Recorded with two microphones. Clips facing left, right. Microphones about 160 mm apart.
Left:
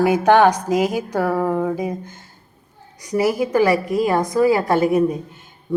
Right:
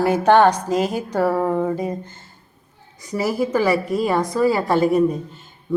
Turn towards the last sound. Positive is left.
turn(degrees=5)  # may be behind; listen again after turning